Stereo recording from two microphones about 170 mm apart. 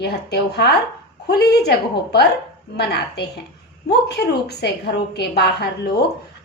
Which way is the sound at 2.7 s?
75° left (ahead or behind).